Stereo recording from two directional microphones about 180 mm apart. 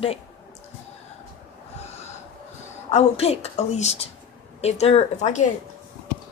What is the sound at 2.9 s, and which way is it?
A woman's voice, 35° left (ahead or behind).